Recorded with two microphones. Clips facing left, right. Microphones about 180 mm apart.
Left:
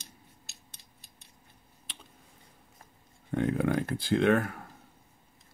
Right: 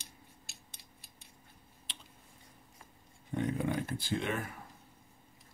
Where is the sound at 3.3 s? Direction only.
90° left.